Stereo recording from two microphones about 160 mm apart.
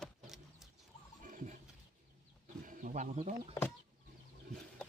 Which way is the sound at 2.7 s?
50° right (ahead or behind).